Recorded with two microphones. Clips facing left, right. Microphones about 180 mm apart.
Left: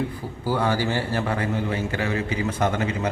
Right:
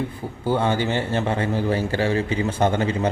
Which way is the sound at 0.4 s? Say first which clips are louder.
Right 2 dB; 25° right (ahead or behind).